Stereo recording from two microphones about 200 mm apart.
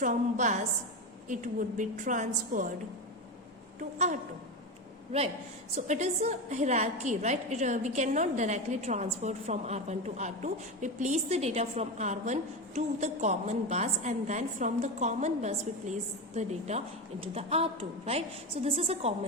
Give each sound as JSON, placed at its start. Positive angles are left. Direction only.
{"t": 0.0, "sound": "a woman's voice", "side_deg": -40}
{"t": 3.8, "sound": "a woman's voice", "side_deg": -35}
{"t": 5.7, "sound": "a woman's voice", "side_deg": -35}